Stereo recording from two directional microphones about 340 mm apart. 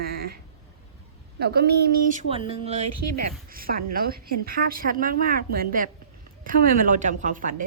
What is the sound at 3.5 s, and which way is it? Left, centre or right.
A woman's voice, right.